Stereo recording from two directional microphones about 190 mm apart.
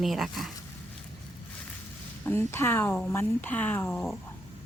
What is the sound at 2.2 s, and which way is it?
Speech, 10° left (ahead or behind).